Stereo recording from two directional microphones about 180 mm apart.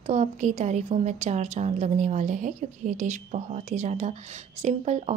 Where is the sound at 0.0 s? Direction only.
40° right (ahead or behind).